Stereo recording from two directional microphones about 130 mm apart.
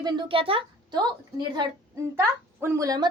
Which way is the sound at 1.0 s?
35° right (ahead or behind).